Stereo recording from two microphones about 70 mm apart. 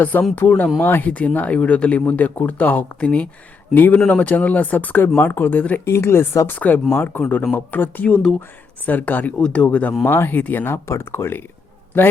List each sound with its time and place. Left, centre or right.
0.0 s speech: left
6.5 s speech: left